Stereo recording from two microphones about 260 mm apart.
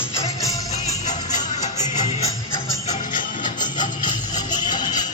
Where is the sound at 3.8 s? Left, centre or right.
Centre.